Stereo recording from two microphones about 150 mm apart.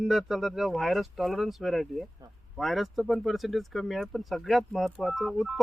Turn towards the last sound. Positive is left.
turn(degrees=0)  # may be behind; listen again after turning